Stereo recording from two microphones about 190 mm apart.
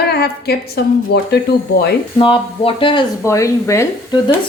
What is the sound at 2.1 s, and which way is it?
Speech, 25° left (ahead or behind).